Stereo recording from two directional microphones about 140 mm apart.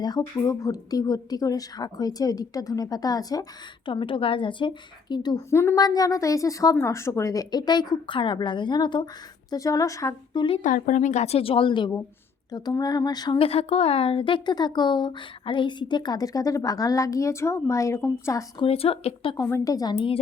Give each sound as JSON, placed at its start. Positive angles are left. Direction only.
{"t": 0.0, "sound": "speech", "side_deg": 25}
{"t": 3.8, "sound": "speech", "side_deg": 35}
{"t": 5.5, "sound": "speech", "side_deg": 20}
{"t": 10.6, "sound": "a woman's voice", "side_deg": 70}
{"t": 13.4, "sound": "speech", "side_deg": 45}
{"t": 18.6, "sound": "speech", "side_deg": 40}
{"t": 19.4, "sound": "speech", "side_deg": 20}